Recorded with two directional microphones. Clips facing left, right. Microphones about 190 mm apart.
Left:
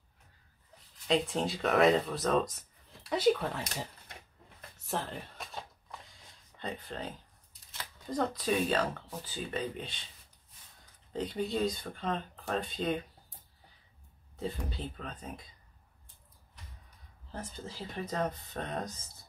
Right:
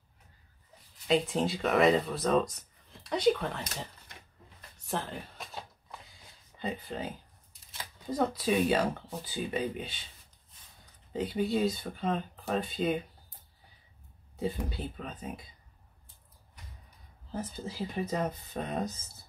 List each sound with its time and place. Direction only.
1.0 s speech: centre (ahead or behind)
4.8 s a sound: centre (ahead or behind)
6.5 s speech: 5° right (ahead or behind)
11.1 s speech: 5° right (ahead or behind)
14.3 s speech: 10° right (ahead or behind)
17.3 s speech: 5° right (ahead or behind)